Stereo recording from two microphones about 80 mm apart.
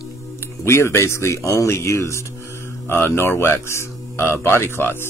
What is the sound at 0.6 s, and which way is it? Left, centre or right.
Speech, left.